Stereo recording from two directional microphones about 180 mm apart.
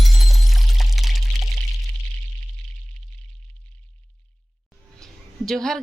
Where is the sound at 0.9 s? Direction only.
Centre (ahead or behind).